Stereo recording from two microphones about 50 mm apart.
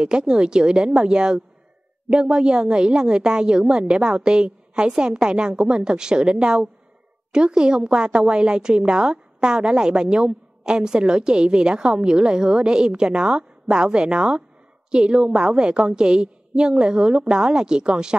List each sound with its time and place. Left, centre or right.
0.0 s a woman's voice: centre